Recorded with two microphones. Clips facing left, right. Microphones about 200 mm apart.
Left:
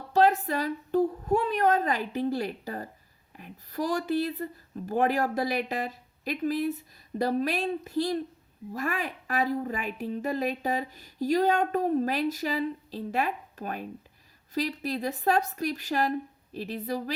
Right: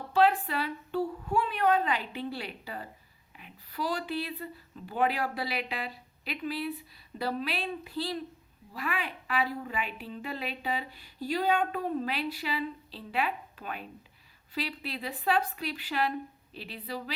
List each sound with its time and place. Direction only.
0.1 s a woman's voice: 40° left (ahead or behind)